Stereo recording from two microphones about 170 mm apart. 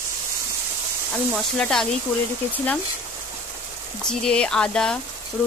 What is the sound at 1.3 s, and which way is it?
Speech, 5° left (ahead or behind).